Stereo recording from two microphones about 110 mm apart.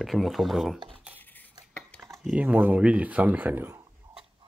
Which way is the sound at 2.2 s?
10° right (ahead or behind).